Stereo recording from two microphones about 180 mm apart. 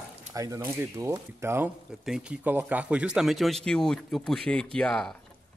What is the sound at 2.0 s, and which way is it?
A man's voice, 5° right (ahead or behind).